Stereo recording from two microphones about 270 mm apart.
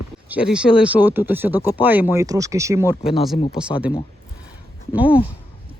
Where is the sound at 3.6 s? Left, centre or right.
Centre.